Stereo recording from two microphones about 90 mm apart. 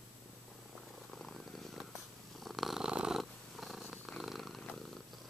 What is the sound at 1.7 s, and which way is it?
Purr, centre (ahead or behind).